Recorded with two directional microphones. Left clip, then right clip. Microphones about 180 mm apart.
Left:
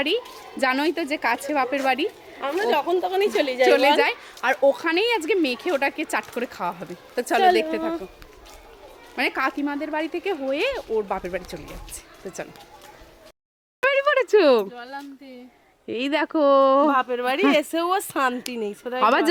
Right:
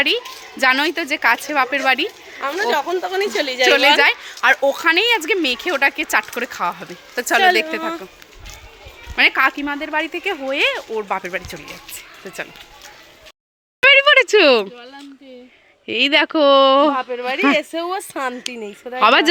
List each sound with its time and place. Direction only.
0.6 s a woman's voice: 5° left (ahead or behind)
2.4 s speech: 15° left (ahead or behind)
3.7 s a woman's voice: centre (ahead or behind)
9.1 s a woman's voice: centre (ahead or behind)
13.8 s a woman's voice: centre (ahead or behind)
15.9 s a woman's voice: centre (ahead or behind)
16.9 s speech: 75° left (ahead or behind)
18.5 s a woman's voice: 65° left (ahead or behind)
18.9 s a woman's voice: centre (ahead or behind)